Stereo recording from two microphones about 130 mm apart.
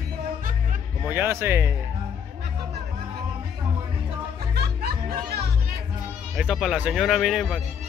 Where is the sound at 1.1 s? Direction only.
20° right (ahead or behind).